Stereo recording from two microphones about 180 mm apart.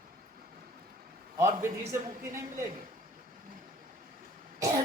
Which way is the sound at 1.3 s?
15° right (ahead or behind).